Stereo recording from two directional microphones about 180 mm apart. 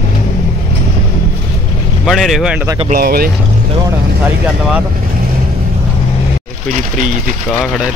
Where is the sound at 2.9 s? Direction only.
55° right (ahead or behind).